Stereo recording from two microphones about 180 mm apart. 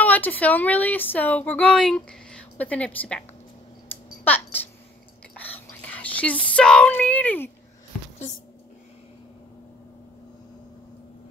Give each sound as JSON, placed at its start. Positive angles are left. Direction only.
{"t": 0.0, "sound": "speech", "side_deg": 10}
{"t": 3.9, "sound": "a sound", "side_deg": 10}
{"t": 5.3, "sound": "whispering", "side_deg": 10}
{"t": 6.4, "sound": "speech", "side_deg": 5}